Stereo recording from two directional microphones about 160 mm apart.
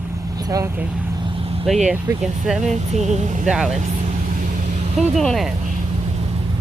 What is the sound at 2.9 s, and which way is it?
Speech, 45° right (ahead or behind).